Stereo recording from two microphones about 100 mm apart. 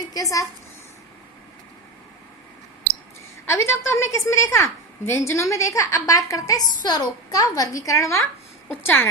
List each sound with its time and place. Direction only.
0.1 s a woman's voice: 35° left (ahead or behind)
3.4 s a woman's voice: 25° left (ahead or behind)